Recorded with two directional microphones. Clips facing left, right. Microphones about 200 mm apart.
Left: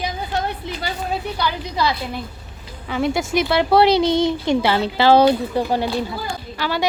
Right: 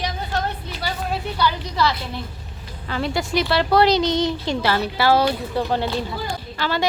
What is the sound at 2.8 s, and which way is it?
Speech, 5° left (ahead or behind).